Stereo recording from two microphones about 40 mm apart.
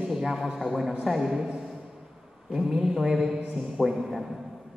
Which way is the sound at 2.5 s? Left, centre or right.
Centre.